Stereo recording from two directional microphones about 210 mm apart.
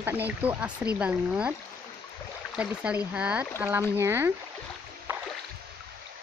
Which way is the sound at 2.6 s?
5° right (ahead or behind).